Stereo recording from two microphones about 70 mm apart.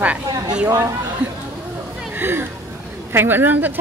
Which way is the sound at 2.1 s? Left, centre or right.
Right.